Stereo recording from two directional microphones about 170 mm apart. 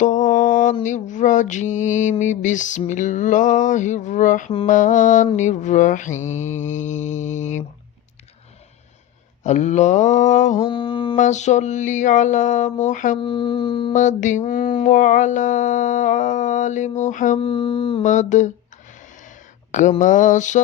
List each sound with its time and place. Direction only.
0.0 s mantra: 45° left (ahead or behind)
9.4 s mantra: 45° left (ahead or behind)
10.7 s a sound: 30° left (ahead or behind)
11.2 s mantra: 45° left (ahead or behind)
13.2 s a sound: 30° left (ahead or behind)
13.9 s mantra: 45° left (ahead or behind)
17.4 s mantra: 30° left (ahead or behind)
18.0 s mantra: 45° left (ahead or behind)
19.7 s mantra: 45° left (ahead or behind)